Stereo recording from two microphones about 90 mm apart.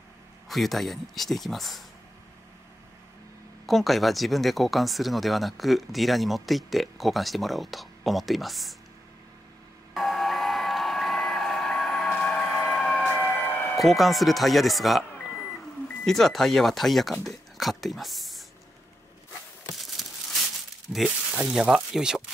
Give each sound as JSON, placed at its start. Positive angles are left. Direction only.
{"t": 0.5, "sound": "speech", "side_deg": 0}
{"t": 3.6, "sound": "speech", "side_deg": 0}
{"t": 9.9, "sound": "a sound", "side_deg": 0}
{"t": 13.1, "sound": "music", "side_deg": 20}
{"t": 13.7, "sound": "speech", "side_deg": 0}
{"t": 19.7, "sound": "a sound", "side_deg": 0}
{"t": 20.9, "sound": "speech", "side_deg": -5}